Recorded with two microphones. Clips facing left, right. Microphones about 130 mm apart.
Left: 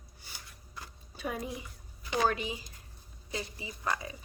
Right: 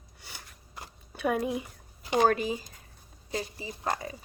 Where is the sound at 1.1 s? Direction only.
60° right (ahead or behind).